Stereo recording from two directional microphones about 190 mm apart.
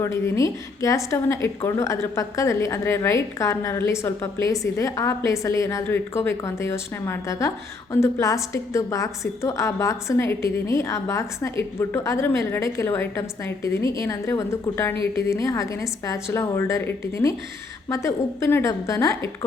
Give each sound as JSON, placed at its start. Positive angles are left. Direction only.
{"t": 0.0, "sound": "a woman's voice", "side_deg": 15}